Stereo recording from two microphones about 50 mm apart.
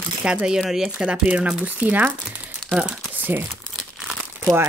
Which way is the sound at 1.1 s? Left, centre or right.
Right.